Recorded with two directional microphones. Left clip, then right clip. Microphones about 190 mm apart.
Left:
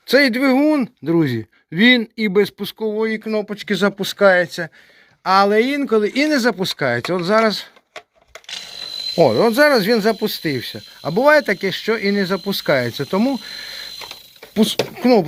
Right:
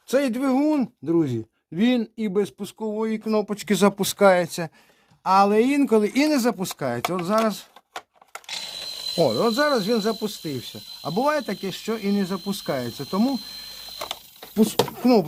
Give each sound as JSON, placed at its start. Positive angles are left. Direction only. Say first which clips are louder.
{"t": 0.1, "sound": "speech", "louder": "left 8 dB", "side_deg": 10}
{"t": 3.5, "sound": "speech", "louder": "left 2 dB", "side_deg": -20}
{"t": 5.2, "sound": "speech", "louder": "left 4 dB", "side_deg": -5}
{"t": 9.1, "sound": "speech", "louder": "left 7 dB", "side_deg": 5}
{"t": 14.5, "sound": "speech", "louder": "left 4 dB", "side_deg": 0}
{"t": 15.1, "sound": "speech", "louder": "left 5 dB", "side_deg": -10}